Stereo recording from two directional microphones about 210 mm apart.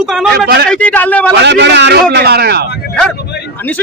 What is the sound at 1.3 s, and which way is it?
A man's voice, 55° right (ahead or behind).